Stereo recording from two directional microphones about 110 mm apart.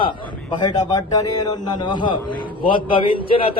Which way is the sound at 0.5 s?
40° left (ahead or behind).